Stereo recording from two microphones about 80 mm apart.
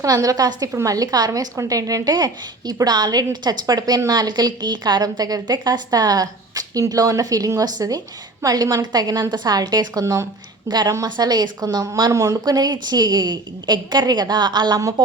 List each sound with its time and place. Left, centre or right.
0.0 s a woman's voice: right
0.7 s a woman's voice: right
10.7 s a woman's voice: right
12.1 s a woman's voice: right